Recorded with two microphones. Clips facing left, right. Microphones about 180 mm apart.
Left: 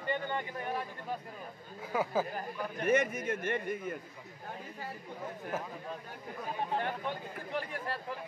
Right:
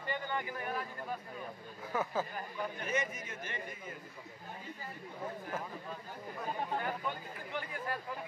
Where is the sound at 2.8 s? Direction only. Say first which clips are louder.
Left 12 dB; 60° left (ahead or behind).